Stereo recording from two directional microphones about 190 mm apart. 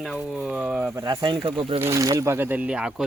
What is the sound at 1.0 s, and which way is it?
Speech, 20° right (ahead or behind).